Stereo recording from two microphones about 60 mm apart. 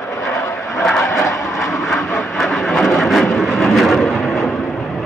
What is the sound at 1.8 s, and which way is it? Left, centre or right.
Vehicle, centre.